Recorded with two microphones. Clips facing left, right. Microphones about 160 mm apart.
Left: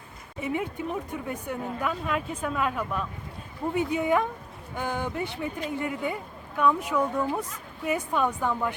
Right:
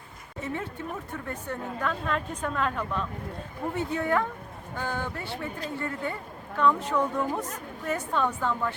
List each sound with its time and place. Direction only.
0.3 s speech: 15° left (ahead or behind)